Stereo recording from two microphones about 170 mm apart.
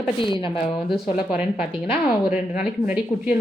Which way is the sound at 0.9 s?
5° right (ahead or behind).